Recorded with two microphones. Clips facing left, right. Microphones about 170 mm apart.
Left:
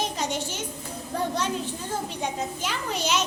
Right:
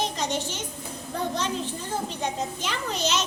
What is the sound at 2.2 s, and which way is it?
A child's voice, 10° left (ahead or behind).